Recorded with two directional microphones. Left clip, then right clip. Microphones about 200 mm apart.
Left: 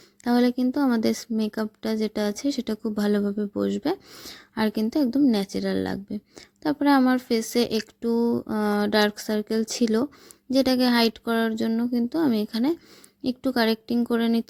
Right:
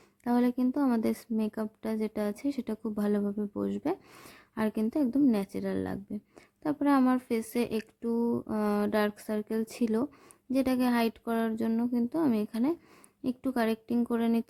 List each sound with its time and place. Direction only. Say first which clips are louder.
0.3 s a woman's voice: left 6 dB; 15° left (ahead or behind)